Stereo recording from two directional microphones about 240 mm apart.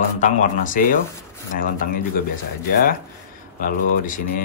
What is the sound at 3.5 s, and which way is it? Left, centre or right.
Speech, left.